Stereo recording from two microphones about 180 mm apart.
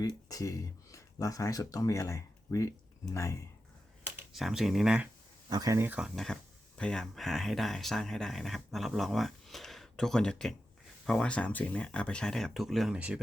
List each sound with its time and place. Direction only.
0.3 s speech: 20° left (ahead or behind)
4.0 s speech: 5° right (ahead or behind)
5.5 s speech: 20° right (ahead or behind)
6.1 s speech: 5° left (ahead or behind)